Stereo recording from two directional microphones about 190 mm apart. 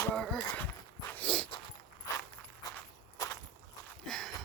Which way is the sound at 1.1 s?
5° left (ahead or behind).